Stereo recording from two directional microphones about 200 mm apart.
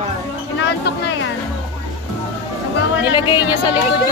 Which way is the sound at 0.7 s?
60° left (ahead or behind).